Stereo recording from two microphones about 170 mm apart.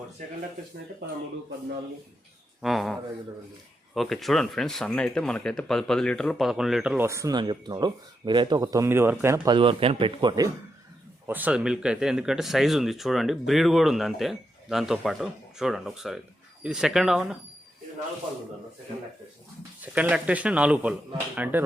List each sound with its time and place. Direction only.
2.6 s speech: centre (ahead or behind); by 9.6 s 15° right (ahead or behind)
9.6 s speech: 30° right (ahead or behind)
11.3 s speech: 10° right (ahead or behind)
19.8 s speech: 10° right (ahead or behind)